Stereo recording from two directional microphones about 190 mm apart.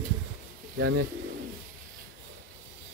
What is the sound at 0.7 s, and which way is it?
Speech, 90° right.